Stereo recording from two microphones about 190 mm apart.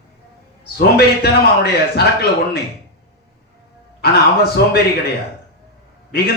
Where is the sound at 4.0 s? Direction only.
55° left (ahead or behind).